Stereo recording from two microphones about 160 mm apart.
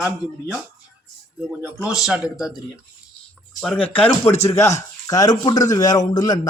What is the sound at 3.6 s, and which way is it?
A man's voice, 5° left (ahead or behind).